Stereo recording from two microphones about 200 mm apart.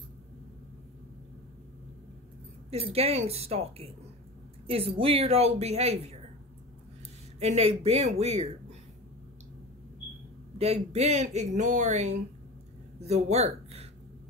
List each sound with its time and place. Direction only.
2.7 s speech: 30° right (ahead or behind)
7.3 s speech: 30° right (ahead or behind)
10.6 s speech: 30° right (ahead or behind)